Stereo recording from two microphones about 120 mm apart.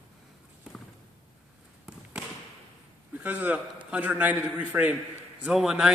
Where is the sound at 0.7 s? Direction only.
5° right (ahead or behind).